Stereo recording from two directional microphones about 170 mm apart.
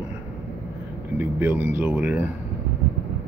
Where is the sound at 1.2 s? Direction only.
10° right (ahead or behind).